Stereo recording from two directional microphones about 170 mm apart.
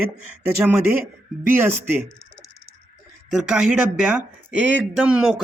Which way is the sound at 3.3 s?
5° right (ahead or behind).